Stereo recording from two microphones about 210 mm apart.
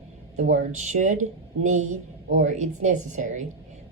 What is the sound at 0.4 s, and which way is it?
Speech, 65° right (ahead or behind).